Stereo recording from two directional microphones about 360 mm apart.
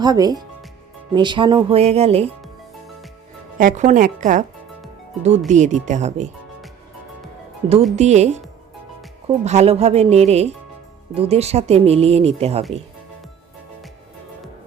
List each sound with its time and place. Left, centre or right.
0.0 s speech: centre
3.6 s speech: right
5.5 s speech: centre
7.9 s speech: centre